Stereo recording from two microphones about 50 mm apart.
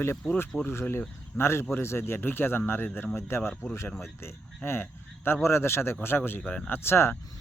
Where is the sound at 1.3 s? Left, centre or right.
Left.